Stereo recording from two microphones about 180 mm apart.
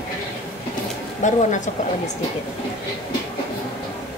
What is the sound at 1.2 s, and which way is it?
Speech, 45° left (ahead or behind).